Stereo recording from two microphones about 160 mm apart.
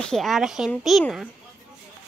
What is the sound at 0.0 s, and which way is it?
Speech, 5° left (ahead or behind).